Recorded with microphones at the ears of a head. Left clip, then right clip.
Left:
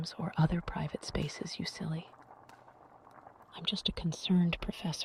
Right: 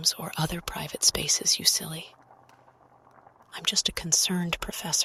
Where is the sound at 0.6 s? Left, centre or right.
Right.